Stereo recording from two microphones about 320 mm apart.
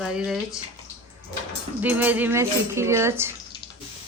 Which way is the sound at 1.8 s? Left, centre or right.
Centre.